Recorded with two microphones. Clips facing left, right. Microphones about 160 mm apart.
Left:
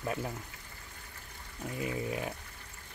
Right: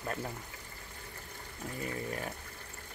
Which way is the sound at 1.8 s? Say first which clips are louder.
Left 3 dB; 10° left (ahead or behind).